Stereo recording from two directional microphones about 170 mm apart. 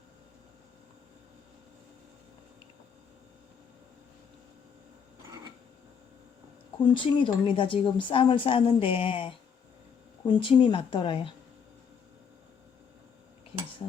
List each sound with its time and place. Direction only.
6.9 s speech: 30° left (ahead or behind)